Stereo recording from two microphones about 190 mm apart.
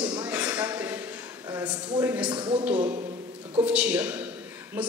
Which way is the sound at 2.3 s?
25° right (ahead or behind).